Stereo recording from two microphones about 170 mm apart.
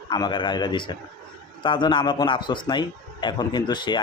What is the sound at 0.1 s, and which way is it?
A man's voice, 25° left (ahead or behind).